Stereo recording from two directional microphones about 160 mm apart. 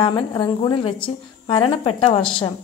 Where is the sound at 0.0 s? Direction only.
30° left (ahead or behind).